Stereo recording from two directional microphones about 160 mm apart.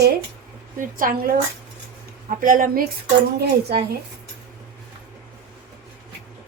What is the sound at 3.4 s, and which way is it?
Speech, 80° right.